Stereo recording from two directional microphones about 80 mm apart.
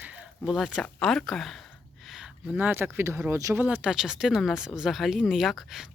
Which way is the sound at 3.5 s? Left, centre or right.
Right.